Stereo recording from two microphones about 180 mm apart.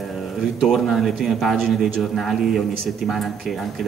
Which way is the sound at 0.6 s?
Centre (ahead or behind).